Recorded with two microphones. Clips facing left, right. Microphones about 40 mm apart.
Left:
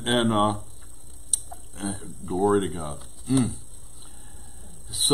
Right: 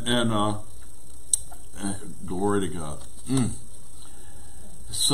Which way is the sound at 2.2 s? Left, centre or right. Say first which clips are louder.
Left 4 dB; left.